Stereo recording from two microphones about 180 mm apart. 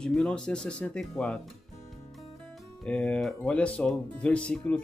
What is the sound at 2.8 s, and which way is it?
Speech, 5° left (ahead or behind).